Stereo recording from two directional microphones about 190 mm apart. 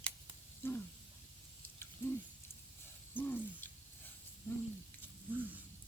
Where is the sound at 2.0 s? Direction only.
10° left (ahead or behind).